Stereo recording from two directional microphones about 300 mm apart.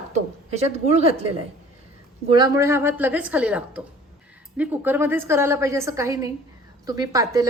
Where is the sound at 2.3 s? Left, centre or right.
Centre.